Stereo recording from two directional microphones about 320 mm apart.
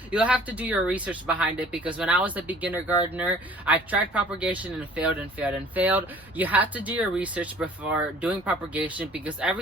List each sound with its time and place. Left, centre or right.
0.1 s speech: centre